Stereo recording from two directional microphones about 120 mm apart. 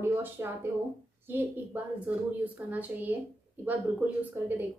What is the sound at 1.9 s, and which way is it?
A woman's voice, 15° right (ahead or behind).